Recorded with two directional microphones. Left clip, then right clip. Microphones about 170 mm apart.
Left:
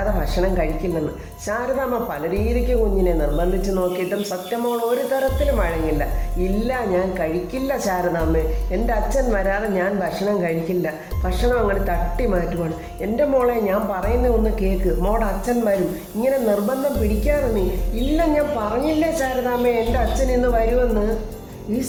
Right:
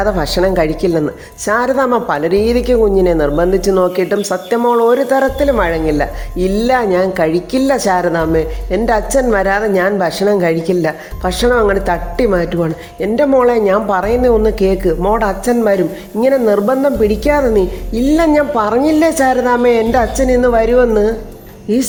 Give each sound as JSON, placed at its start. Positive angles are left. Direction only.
{"t": 0.2, "sound": "a woman's voice", "side_deg": -35}